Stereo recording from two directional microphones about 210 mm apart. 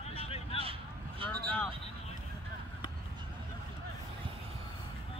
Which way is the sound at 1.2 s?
25° right (ahead or behind).